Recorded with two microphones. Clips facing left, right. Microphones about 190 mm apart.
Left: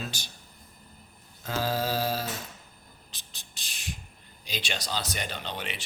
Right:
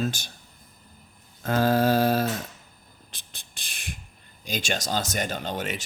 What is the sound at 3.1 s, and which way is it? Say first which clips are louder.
Beatboxing: right 2 dB; 55° right (ahead or behind).